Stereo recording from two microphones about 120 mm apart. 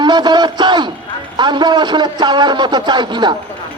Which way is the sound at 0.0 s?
35° right (ahead or behind).